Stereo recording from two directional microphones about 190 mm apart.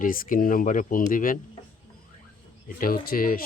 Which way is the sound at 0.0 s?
45° left (ahead or behind).